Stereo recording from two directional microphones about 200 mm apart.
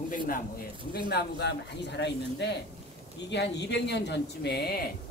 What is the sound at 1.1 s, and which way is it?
A man's voice, 60° left (ahead or behind).